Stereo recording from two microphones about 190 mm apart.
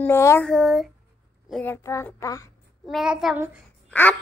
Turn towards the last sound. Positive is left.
turn(degrees=10)  # may be behind; listen again after turning